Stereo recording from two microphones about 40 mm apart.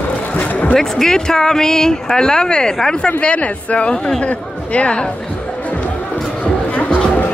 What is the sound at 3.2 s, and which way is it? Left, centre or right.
Speech, left.